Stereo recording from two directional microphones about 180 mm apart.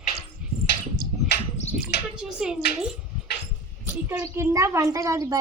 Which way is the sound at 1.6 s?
40° left (ahead or behind).